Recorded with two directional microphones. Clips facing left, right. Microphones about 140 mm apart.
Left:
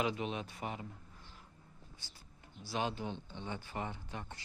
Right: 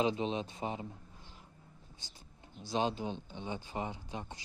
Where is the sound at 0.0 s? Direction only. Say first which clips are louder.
Right 4 dB; 25° right (ahead or behind).